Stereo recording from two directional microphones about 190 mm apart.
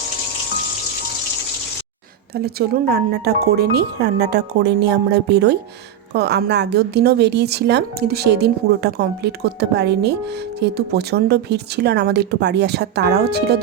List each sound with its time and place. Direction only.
2.3 s a woman's voice: 55° right (ahead or behind)